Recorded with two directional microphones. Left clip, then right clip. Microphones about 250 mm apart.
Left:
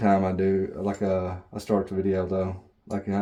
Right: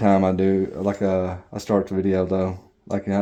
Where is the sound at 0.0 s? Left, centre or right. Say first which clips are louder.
Right 4 dB; right.